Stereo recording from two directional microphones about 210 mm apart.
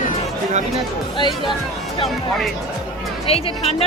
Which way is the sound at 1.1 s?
20° left (ahead or behind).